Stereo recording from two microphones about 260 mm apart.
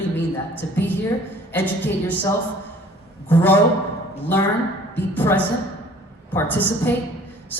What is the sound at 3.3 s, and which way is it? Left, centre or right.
Speech, centre.